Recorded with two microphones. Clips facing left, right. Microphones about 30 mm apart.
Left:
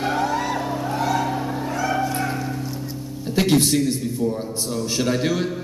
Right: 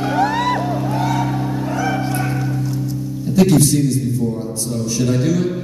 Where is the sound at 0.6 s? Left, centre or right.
Centre.